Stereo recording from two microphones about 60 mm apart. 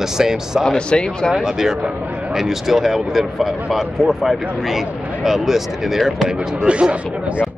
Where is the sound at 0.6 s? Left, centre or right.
Centre.